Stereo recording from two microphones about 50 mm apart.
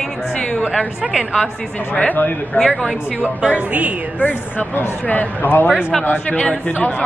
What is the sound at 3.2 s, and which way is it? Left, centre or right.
Speech, right.